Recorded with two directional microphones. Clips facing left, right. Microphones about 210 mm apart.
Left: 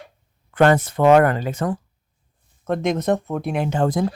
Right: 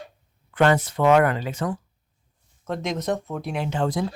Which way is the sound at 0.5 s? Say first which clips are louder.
Left 4 dB; 50° left (ahead or behind).